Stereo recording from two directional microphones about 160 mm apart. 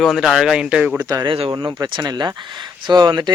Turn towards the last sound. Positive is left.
turn(degrees=-25)  # may be behind; listen again after turning